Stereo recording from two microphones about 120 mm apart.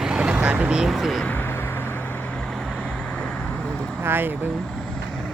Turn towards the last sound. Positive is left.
turn(degrees=5)  # may be behind; listen again after turning